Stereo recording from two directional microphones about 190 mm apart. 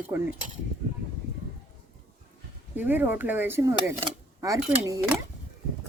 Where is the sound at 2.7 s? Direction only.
10° right (ahead or behind).